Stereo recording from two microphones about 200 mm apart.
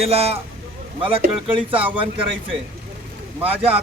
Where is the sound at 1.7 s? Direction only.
10° right (ahead or behind).